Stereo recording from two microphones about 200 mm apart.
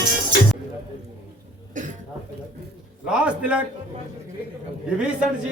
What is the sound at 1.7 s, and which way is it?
Cough, 40° right (ahead or behind).